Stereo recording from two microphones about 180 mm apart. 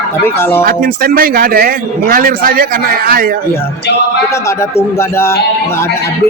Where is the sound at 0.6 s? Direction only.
55° right (ahead or behind).